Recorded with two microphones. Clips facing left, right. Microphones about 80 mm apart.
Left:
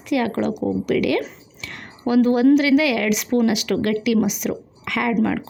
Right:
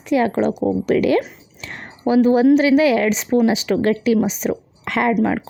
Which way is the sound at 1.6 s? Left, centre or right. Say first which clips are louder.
Right 3 dB; right.